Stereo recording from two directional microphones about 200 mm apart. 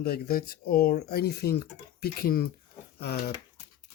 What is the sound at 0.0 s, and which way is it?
Speech, 50° left (ahead or behind).